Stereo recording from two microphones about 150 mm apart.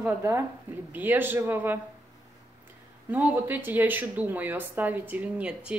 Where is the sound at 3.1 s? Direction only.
10° right (ahead or behind).